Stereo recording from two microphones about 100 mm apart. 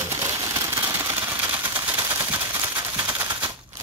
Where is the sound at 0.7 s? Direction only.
25° right (ahead or behind).